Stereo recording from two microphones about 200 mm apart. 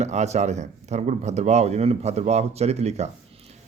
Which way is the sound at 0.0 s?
35° right (ahead or behind).